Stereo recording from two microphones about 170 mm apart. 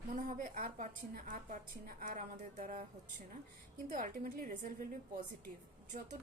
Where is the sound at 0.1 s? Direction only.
50° right (ahead or behind).